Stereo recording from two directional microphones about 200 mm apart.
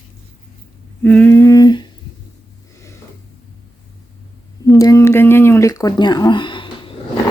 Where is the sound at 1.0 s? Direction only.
5° left (ahead or behind).